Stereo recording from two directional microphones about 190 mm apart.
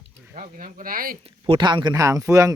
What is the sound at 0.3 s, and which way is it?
Speech, 45° right (ahead or behind).